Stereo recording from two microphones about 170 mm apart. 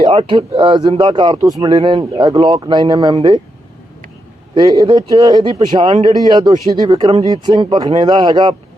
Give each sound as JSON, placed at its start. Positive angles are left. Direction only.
{"t": 0.0, "sound": "speech", "side_deg": -35}
{"t": 4.5, "sound": "speech", "side_deg": -25}